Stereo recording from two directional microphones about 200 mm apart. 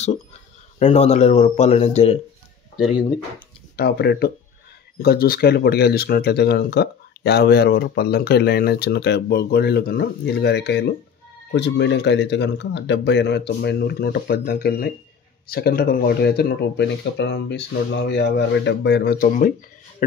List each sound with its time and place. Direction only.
0.7 s speech: 30° left (ahead or behind)
3.7 s speech: 55° left (ahead or behind)